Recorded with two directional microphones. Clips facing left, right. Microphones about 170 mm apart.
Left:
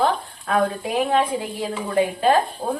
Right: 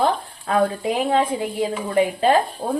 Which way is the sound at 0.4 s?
30° right (ahead or behind).